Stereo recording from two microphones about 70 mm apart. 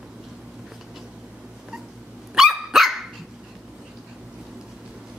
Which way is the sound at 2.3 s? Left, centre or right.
Centre.